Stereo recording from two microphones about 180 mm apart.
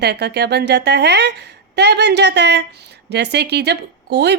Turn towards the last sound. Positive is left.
turn(degrees=-70)  # may be behind; listen again after turning